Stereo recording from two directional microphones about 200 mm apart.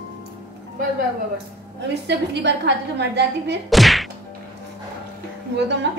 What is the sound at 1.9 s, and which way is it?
A woman's voice, 60° right (ahead or behind).